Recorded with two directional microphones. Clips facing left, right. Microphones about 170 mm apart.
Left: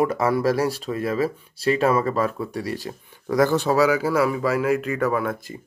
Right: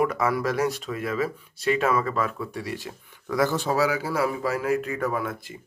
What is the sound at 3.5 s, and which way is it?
Speech, 75° left (ahead or behind).